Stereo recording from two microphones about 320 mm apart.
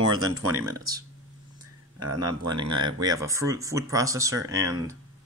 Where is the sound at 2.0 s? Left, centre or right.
Right.